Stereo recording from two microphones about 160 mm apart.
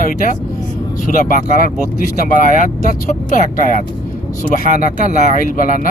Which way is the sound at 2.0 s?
65° left (ahead or behind).